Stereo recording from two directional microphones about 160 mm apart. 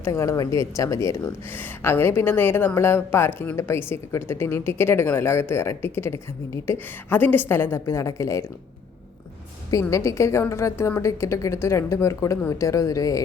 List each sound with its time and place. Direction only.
0.0 s speech: 20° left (ahead or behind)
9.8 s speech: 20° left (ahead or behind)